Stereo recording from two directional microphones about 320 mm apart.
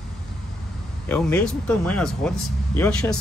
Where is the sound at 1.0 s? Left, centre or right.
Centre.